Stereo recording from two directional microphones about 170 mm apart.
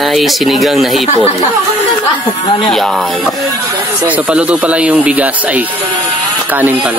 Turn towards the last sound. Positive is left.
turn(degrees=-10)  # may be behind; listen again after turning